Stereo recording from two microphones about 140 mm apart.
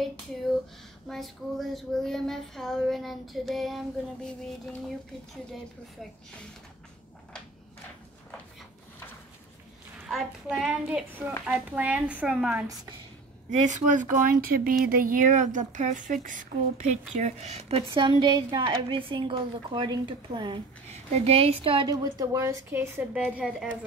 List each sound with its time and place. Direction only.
1.0 s a sound: centre (ahead or behind)
10.0 s a sound: centre (ahead or behind)
11.4 s a woman's voice: 10° right (ahead or behind)
13.5 s speech: 60° right (ahead or behind)
17.9 s a woman's voice: 35° right (ahead or behind)
20.9 s a woman's voice: 45° right (ahead or behind)
21.9 s a woman's voice: 25° right (ahead or behind); by 23.8 s 5° right (ahead or behind)